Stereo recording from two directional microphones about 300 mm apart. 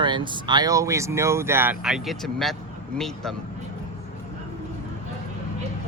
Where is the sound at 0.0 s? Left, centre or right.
Centre.